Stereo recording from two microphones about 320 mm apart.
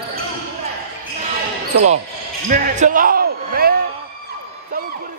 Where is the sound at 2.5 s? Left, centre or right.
Right.